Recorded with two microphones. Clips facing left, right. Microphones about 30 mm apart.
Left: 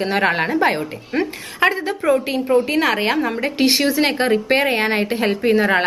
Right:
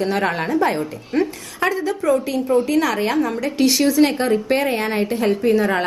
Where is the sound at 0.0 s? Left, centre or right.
Left.